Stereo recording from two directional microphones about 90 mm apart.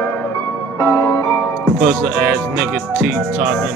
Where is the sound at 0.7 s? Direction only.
25° left (ahead or behind).